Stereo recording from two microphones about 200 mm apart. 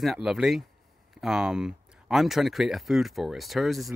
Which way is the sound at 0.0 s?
Centre (ahead or behind).